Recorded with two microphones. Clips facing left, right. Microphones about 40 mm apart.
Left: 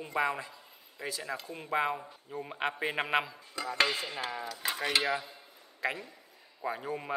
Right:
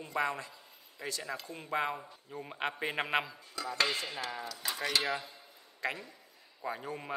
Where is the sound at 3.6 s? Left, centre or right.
Left.